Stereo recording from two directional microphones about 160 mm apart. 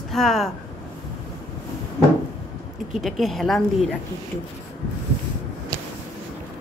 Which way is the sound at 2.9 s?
Centre (ahead or behind).